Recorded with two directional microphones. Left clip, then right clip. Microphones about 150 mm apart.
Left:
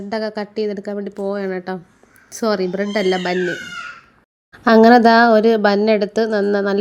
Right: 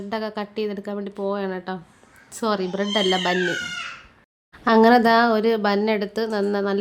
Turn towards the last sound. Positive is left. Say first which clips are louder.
# left 6 dB
turn(degrees=25)  # may be behind; listen again after turning